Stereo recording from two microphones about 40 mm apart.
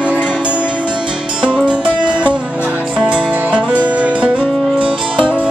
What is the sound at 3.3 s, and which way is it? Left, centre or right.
Music, right.